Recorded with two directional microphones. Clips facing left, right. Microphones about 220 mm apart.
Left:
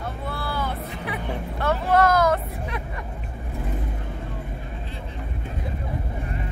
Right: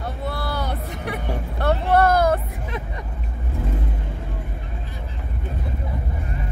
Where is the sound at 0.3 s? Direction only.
70° right (ahead or behind).